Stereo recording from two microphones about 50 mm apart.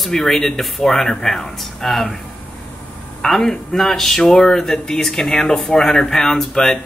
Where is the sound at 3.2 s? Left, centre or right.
Centre.